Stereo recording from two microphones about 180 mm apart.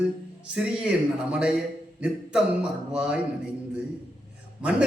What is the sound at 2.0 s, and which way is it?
A man's voice, 5° right (ahead or behind).